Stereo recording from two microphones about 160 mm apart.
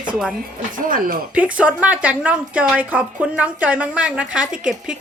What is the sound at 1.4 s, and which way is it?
A woman's voice, 10° right (ahead or behind).